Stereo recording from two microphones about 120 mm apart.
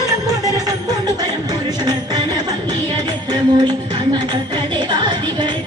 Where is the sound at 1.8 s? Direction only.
35° right (ahead or behind).